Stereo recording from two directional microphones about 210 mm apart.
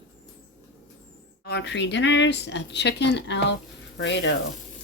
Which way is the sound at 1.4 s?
55° left (ahead or behind).